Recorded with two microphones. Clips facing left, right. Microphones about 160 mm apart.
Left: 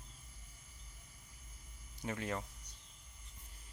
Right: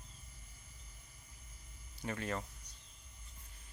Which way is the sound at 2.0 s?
15° left (ahead or behind).